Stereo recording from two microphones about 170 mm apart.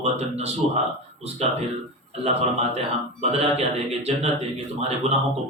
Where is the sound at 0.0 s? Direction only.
40° right (ahead or behind).